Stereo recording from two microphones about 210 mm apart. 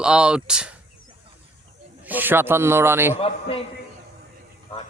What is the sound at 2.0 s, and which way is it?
A man's voice, 10° right (ahead or behind).